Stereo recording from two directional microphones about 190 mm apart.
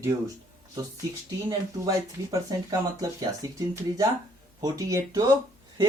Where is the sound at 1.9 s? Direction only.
20° right (ahead or behind).